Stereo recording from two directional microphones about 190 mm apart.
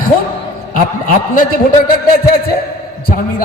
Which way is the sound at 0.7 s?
45° left (ahead or behind).